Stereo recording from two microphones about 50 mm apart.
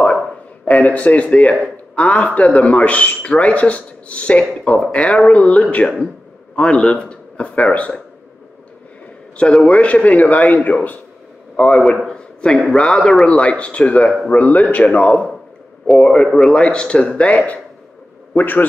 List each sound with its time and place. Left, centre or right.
0.7 s a man's voice: left
9.6 s speech: left
12.1 s a sound: centre
12.7 s speech: centre
16.0 s a man's voice: centre
18.3 s speech: left